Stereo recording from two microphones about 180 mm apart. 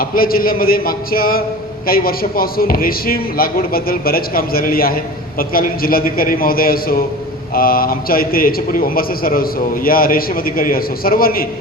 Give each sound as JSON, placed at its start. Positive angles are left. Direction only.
{"t": 0.0, "sound": "a man's voice", "side_deg": 55}